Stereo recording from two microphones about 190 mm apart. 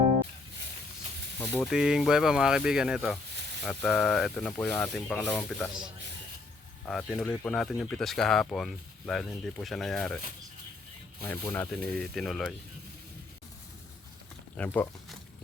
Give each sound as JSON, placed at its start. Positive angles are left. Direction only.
{"t": 1.7, "sound": "speech", "side_deg": -5}
{"t": 6.8, "sound": "speech", "side_deg": 0}
{"t": 11.2, "sound": "speech", "side_deg": 10}
{"t": 14.5, "sound": "speech", "side_deg": 10}